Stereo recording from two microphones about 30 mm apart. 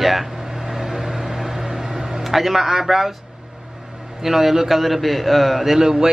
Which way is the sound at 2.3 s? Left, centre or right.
Centre.